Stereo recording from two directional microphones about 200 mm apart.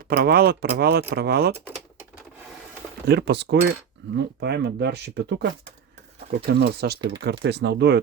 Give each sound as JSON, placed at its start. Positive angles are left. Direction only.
{"t": 0.1, "sound": "speech", "side_deg": -50}
{"t": 3.1, "sound": "speech", "side_deg": -55}